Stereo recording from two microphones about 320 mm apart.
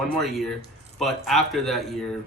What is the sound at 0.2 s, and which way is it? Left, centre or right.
Speech, centre.